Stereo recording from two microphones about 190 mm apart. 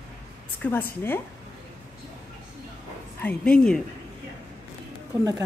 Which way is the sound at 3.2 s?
5° left (ahead or behind).